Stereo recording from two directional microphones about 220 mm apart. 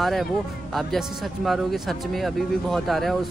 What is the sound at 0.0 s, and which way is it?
Speech, centre (ahead or behind).